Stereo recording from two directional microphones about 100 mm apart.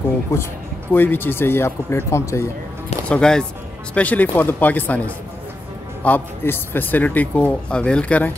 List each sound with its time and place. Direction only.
0.3 s a man's voice: 30° left (ahead or behind)
3.1 s a man's voice: 10° left (ahead or behind)